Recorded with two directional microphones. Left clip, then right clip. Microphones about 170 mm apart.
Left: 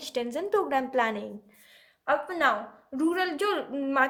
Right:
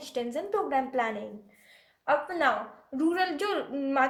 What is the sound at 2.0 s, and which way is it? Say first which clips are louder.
A woman's voice: left 1 dB; 25° left (ahead or behind).